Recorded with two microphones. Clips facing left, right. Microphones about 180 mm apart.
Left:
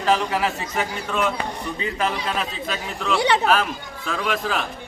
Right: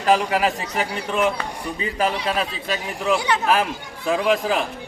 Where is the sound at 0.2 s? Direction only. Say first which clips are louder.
Right 2 dB; 10° right (ahead or behind).